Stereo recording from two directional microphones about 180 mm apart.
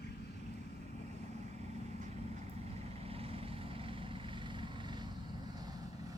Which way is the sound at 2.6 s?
35° right (ahead or behind).